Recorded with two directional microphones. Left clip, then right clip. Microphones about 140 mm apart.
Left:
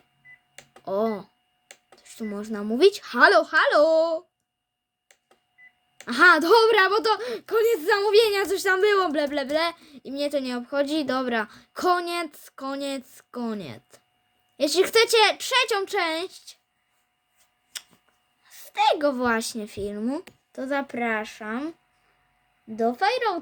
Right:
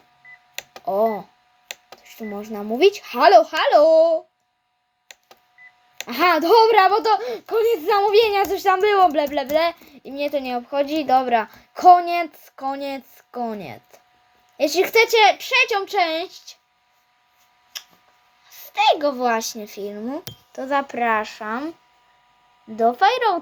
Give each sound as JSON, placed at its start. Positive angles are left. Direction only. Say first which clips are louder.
{"t": 0.9, "sound": "speech", "louder": "right 6 dB", "side_deg": 70}
{"t": 2.0, "sound": "a sound", "louder": "right 2 dB", "side_deg": 25}
{"t": 2.4, "sound": "speech", "louder": "right 2 dB", "side_deg": 30}
{"t": 6.1, "sound": "a woman's voice", "louder": "even", "side_deg": 35}
{"t": 18.6, "sound": "a woman's voice", "louder": "right 4 dB", "side_deg": 30}
{"t": 20.5, "sound": "speech", "louder": "right 6 dB", "side_deg": 35}
{"t": 22.7, "sound": "speech", "louder": "right 6 dB", "side_deg": 15}